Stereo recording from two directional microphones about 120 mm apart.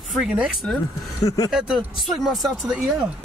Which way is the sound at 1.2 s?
30° left (ahead or behind).